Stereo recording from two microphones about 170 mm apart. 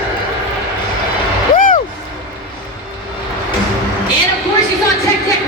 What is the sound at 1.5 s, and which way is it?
Vehicle, 55° left (ahead or behind).